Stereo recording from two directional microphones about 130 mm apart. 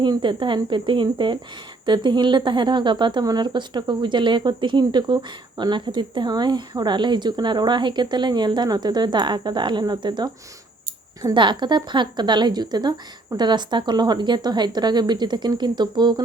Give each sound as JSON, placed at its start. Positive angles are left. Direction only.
{"t": 0.0, "sound": "speech", "side_deg": -35}